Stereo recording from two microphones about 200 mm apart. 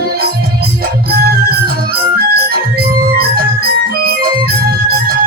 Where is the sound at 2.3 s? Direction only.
50° right (ahead or behind).